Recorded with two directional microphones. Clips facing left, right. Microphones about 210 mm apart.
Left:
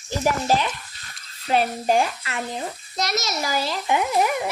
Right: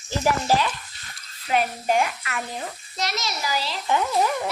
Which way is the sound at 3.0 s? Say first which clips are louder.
Left 3 dB; 45° left (ahead or behind).